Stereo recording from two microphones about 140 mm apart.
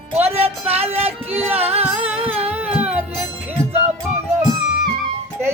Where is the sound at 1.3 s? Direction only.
10° right (ahead or behind).